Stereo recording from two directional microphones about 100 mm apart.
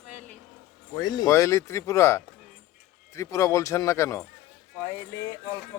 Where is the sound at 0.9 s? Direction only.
45° left (ahead or behind).